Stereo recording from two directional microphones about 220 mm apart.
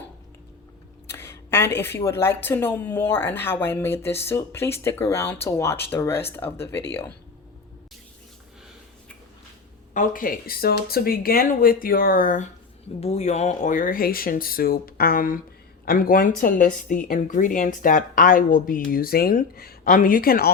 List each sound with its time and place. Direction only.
1.0 s speech: 10° left (ahead or behind)
9.9 s a woman's voice: 35° left (ahead or behind)